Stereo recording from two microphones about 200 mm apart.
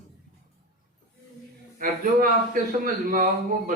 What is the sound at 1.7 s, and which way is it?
A man's voice, 45° right (ahead or behind).